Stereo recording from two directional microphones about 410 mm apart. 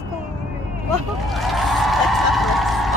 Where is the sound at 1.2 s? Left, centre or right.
Centre.